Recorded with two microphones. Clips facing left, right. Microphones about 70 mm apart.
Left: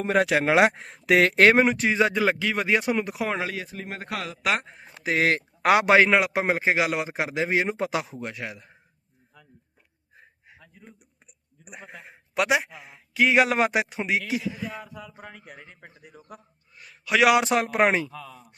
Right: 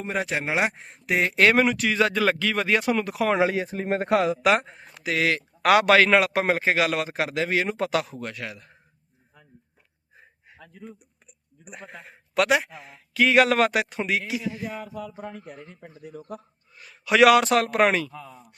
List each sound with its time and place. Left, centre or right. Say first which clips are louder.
0.0 s speech: left 6 dB; left
1.4 s speech: left 2 dB; left
2.2 s a man's voice: right 1 dB; centre
3.4 s speech: right 8 dB; right
4.4 s speech: right 5 dB; centre
4.9 s speech: left 1 dB; left
5.6 s speech: right 1 dB; left
6.1 s a man's voice: right 2 dB; centre
11.6 s a man's voice: right 1 dB; centre
16.7 s a man's voice: right 3 dB; centre
17.3 s speech: right 2 dB; centre
18.1 s speech: even; right